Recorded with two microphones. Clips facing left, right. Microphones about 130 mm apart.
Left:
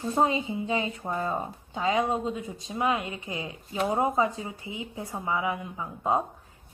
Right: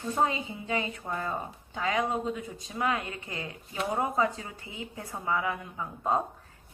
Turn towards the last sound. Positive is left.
turn(degrees=15)  # may be behind; listen again after turning